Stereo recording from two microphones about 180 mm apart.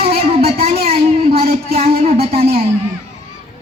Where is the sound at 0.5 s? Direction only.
60° right (ahead or behind).